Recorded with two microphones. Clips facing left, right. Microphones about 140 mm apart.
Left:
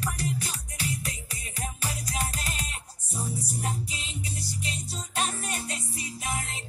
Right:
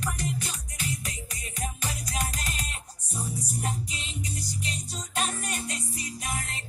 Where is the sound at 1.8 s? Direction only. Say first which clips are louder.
Left 2 dB; 35° left (ahead or behind).